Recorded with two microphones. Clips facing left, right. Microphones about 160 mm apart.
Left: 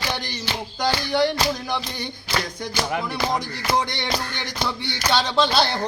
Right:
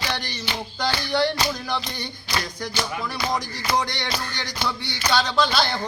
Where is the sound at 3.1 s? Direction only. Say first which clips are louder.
Left 2 dB; 20° left (ahead or behind).